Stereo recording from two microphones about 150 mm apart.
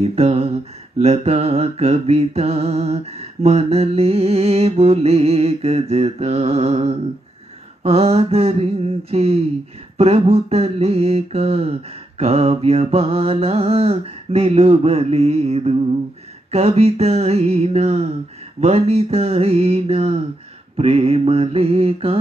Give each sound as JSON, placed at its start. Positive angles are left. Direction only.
{"t": 0.0, "sound": "mantra", "side_deg": -40}